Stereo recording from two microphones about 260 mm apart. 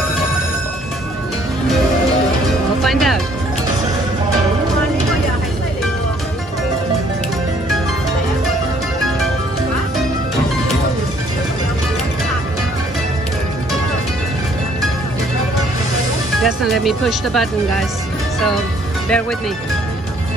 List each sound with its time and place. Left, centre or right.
2.8 s music: centre
16.4 s speech: centre